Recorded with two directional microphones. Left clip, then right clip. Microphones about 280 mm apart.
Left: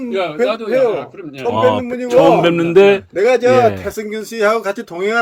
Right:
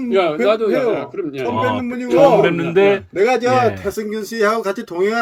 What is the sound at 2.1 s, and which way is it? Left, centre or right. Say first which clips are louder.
Speech: left 1 dB; left.